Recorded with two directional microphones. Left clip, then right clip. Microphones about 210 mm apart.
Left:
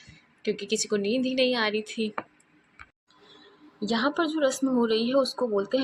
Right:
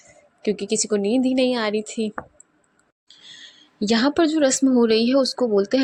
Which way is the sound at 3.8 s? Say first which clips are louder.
Right 7 dB; 45° right (ahead or behind).